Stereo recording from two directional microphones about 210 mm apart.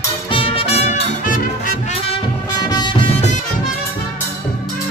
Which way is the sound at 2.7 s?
20° left (ahead or behind).